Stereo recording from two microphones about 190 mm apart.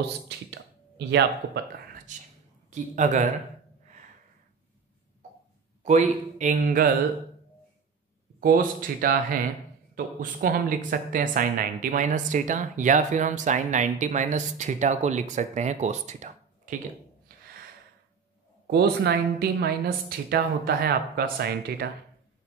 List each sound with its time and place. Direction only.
0.9 s a woman's voice: 65° right (ahead or behind)
2.1 s speech: 40° right (ahead or behind)
5.9 s speech: 40° right (ahead or behind)
8.4 s speech: 50° right (ahead or behind)
18.7 s a woman's voice: 55° right (ahead or behind)